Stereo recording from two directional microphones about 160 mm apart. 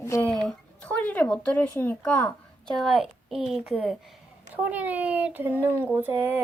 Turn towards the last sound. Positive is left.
turn(degrees=-10)  # may be behind; listen again after turning